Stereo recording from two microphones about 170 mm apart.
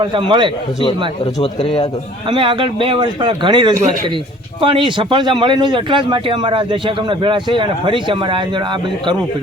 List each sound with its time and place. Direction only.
0.0 s speech: 25° right (ahead or behind)
1.5 s a man's voice: 30° left (ahead or behind)
2.2 s speech: 30° right (ahead or behind)